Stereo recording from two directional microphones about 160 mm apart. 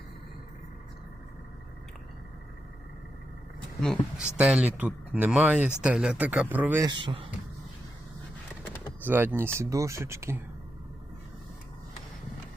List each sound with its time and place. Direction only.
3.8 s speech: 5° left (ahead or behind)
6.8 s speech: 30° right (ahead or behind)
9.0 s speech: 10° right (ahead or behind)